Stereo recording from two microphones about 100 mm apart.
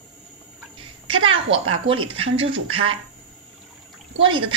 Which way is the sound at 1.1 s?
65° right (ahead or behind).